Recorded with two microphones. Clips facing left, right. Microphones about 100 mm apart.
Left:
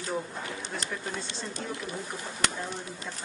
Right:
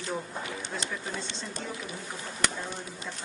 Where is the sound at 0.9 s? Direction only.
Centre (ahead or behind).